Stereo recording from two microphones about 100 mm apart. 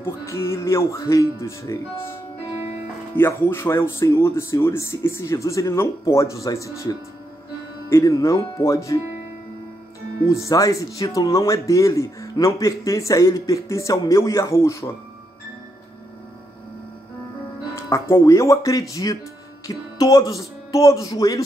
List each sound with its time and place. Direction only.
0.0 s speech: 25° left (ahead or behind)
3.2 s speech: 25° left (ahead or behind)
10.2 s speech: 30° left (ahead or behind)
17.7 s speech: 30° left (ahead or behind)